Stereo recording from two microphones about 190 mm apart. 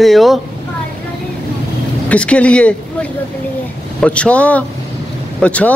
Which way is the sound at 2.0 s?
5° left (ahead or behind).